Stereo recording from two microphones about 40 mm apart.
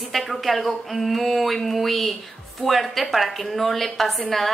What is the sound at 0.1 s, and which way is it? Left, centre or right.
A woman's voice, centre.